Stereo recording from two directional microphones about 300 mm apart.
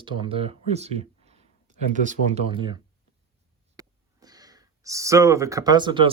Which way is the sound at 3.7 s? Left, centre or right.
Centre.